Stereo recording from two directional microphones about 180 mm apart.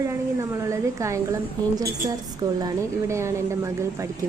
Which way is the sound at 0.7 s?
15° right (ahead or behind).